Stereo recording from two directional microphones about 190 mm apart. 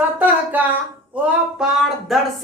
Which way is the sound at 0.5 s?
10° right (ahead or behind).